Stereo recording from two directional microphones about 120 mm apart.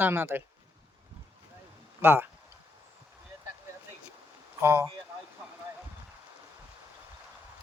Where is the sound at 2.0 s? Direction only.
20° right (ahead or behind).